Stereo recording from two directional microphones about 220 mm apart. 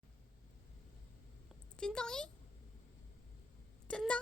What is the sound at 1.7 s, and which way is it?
Speech, 5° left (ahead or behind).